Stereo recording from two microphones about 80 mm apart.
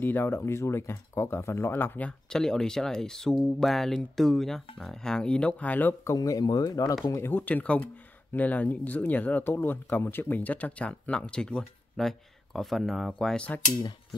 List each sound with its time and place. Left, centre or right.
0.0 s speech: left
2.0 s speech: centre
6.1 s speech: left
7.2 s speech: left; by 13.6 s centre